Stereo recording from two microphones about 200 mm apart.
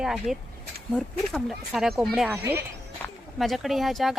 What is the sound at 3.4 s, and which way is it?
Speech, centre (ahead or behind).